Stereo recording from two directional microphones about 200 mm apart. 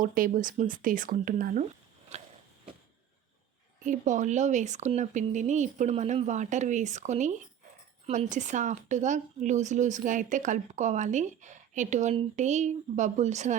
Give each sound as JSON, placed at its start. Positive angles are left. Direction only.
{"t": 0.0, "sound": "speech", "side_deg": -45}
{"t": 2.1, "sound": "a sound", "side_deg": -35}
{"t": 3.8, "sound": "speech", "side_deg": -40}